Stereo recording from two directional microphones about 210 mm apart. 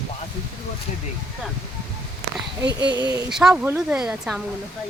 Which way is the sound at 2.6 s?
55° right (ahead or behind).